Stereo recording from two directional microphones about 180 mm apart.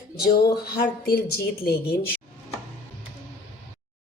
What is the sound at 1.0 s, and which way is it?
Speech, 60° left (ahead or behind).